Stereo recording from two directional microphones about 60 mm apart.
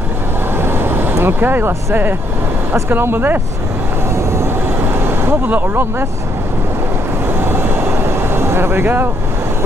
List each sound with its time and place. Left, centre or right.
0.6 s vehicle: right
1.1 s speech: right
2.7 s speech: right
4.1 s vehicle: right
5.5 s speech: right
7.2 s vehicle: right